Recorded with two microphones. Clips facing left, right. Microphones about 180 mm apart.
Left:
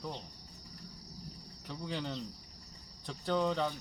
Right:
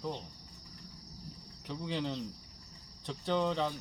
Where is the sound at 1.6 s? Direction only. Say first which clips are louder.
Right 3 dB; centre (ahead or behind).